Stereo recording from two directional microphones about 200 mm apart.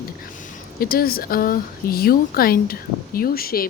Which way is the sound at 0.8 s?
50° left (ahead or behind).